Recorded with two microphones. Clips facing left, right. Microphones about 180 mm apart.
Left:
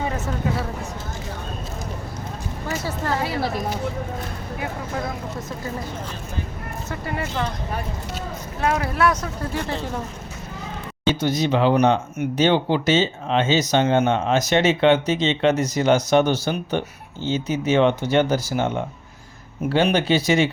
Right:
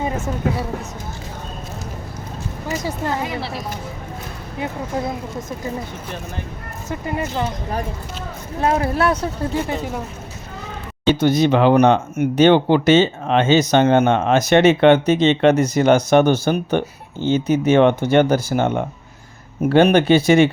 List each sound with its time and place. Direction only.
2.6 s speech: 15° right (ahead or behind)
6.9 s speech: 20° right (ahead or behind)
8.6 s speech: 30° right (ahead or behind)
9.6 s speech: 10° right (ahead or behind)
11.1 s speech: 60° right (ahead or behind)